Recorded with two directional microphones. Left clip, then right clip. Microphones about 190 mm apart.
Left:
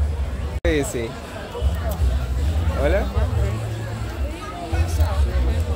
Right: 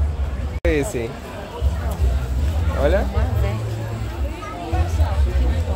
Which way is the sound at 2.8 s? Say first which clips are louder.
Right 2 dB; 10° right (ahead or behind).